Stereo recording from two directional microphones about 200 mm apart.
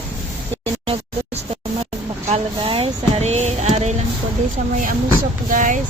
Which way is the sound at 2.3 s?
25° right (ahead or behind).